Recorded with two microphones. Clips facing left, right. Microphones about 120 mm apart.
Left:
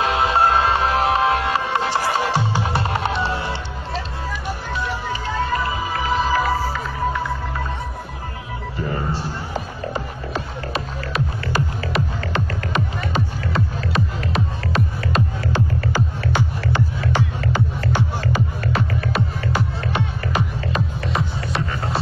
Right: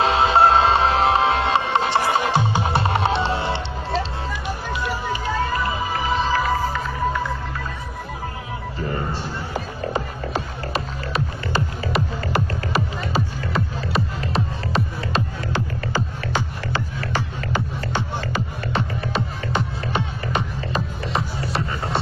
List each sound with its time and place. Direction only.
0.0 s music: 25° right (ahead or behind)
5.9 s music: centre (ahead or behind)
10.7 s music: centre (ahead or behind)
15.9 s music: 15° left (ahead or behind)
18.6 s music: centre (ahead or behind)